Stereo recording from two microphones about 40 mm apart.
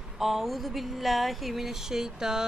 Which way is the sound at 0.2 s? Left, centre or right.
Centre.